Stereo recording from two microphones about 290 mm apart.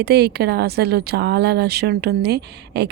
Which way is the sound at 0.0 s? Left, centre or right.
Right.